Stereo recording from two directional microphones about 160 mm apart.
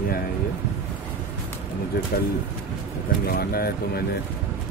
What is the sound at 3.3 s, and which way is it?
Speech, 75° left (ahead or behind).